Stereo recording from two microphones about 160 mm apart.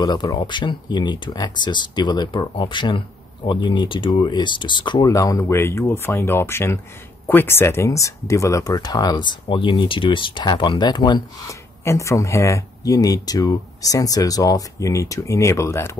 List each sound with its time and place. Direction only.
0.0 s speech: 25° left (ahead or behind)